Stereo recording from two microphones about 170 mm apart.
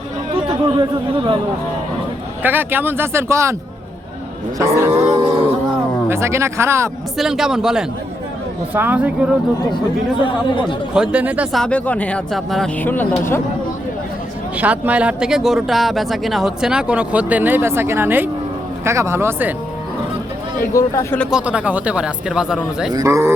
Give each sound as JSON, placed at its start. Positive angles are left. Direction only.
{"t": 0.4, "sound": "speech", "side_deg": -30}
{"t": 2.4, "sound": "speech", "side_deg": -10}
{"t": 4.5, "sound": "speech", "side_deg": -15}
{"t": 5.2, "sound": "speech", "side_deg": -35}
{"t": 6.1, "sound": "speech", "side_deg": -15}
{"t": 7.2, "sound": "speech", "side_deg": 0}
{"t": 10.2, "sound": "speech", "side_deg": 30}
{"t": 10.9, "sound": "speech", "side_deg": -5}
{"t": 11.6, "sound": "speech", "side_deg": 10}
{"t": 14.6, "sound": "speech", "side_deg": -10}
{"t": 20.7, "sound": "speech", "side_deg": 15}
{"t": 21.2, "sound": "speech", "side_deg": -5}
{"t": 22.9, "sound": "speech", "side_deg": -20}